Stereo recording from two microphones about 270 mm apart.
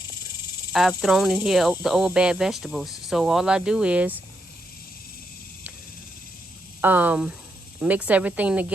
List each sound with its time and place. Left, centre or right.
0.7 s speech: centre
6.8 s speech: centre